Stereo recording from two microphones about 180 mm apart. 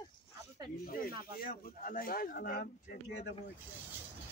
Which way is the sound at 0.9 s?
55° left (ahead or behind).